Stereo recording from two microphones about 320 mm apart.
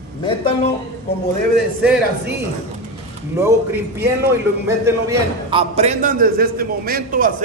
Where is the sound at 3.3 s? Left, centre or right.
Centre.